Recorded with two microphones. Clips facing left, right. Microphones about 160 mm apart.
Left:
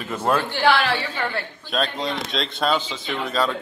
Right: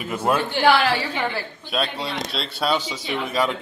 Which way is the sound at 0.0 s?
10° right (ahead or behind).